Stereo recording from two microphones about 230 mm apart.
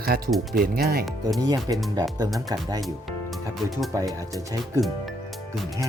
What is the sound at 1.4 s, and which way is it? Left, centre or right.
Speech, centre.